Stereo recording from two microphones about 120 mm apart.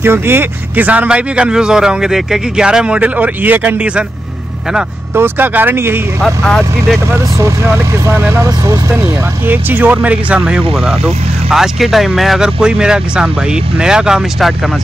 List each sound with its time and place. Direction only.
0.0 s speech: 20° right (ahead or behind)
5.1 s speech: 15° right (ahead or behind)
6.2 s speech: 5° left (ahead or behind)
7.1 s speech: 25° right (ahead or behind); by 14.5 s 5° right (ahead or behind)